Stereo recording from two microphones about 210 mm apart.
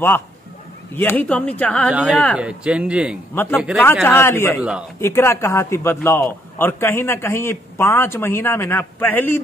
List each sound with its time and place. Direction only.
0.9 s a man's voice: 10° left (ahead or behind)
2.0 s speech: 5° right (ahead or behind)
3.3 s a man's voice: 10° left (ahead or behind)
4.6 s speech: 5° right (ahead or behind)
5.0 s a man's voice: 10° left (ahead or behind)